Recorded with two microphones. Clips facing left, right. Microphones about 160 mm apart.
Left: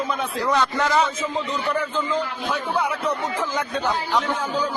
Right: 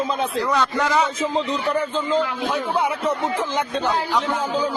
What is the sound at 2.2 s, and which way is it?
Speech, 55° right (ahead or behind).